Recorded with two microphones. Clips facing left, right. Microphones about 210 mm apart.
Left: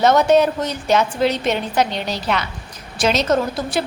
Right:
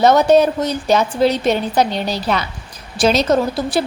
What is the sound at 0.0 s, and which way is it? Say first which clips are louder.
A woman's voice: right 2 dB; 35° right (ahead or behind).